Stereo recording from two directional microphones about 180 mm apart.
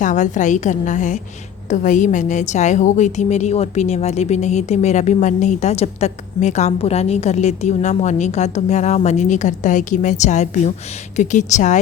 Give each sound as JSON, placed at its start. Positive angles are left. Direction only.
{"t": 0.0, "sound": "a woman's voice", "side_deg": 45}